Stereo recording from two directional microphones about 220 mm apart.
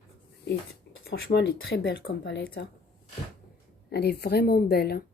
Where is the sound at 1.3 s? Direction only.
50° left (ahead or behind).